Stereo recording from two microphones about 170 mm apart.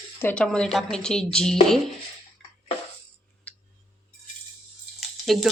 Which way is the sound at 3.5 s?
10° left (ahead or behind).